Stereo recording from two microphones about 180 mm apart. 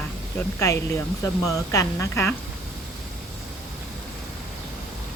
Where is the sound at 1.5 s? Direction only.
15° left (ahead or behind).